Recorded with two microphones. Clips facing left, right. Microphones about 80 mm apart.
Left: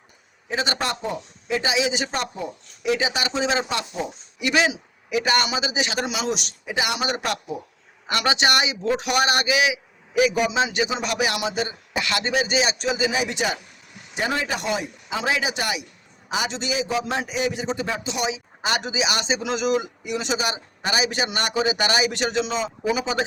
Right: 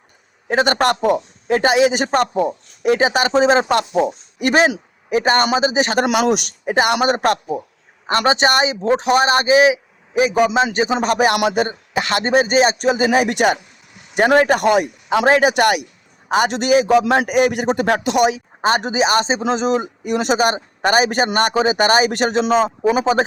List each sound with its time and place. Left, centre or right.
0.4 s a man's voice: right
18.6 s a man's voice: right